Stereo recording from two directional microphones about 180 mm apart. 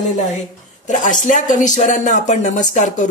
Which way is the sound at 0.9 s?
45° left (ahead or behind).